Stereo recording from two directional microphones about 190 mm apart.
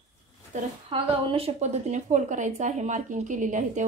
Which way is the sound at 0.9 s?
30° right (ahead or behind).